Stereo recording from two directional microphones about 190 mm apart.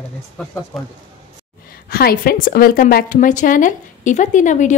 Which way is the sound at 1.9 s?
50° left (ahead or behind).